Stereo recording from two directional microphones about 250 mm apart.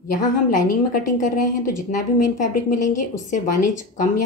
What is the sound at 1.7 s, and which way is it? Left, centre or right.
Speech, left.